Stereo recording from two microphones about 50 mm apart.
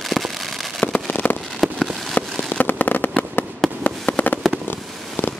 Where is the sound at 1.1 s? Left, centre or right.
Left.